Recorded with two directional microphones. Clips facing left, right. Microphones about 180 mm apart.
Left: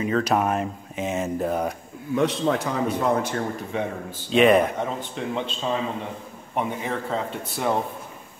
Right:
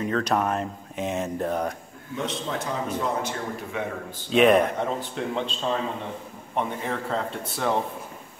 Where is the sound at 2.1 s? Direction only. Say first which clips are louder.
Left 8 dB; 65° left (ahead or behind).